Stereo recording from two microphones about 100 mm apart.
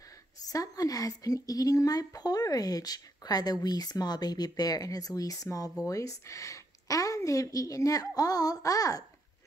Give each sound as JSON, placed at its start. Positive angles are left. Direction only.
{"t": 0.5, "sound": "a woman's voice", "side_deg": 35}